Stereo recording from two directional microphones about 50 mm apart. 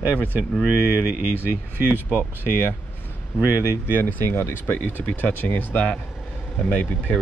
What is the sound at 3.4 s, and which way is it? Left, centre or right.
Speech, right.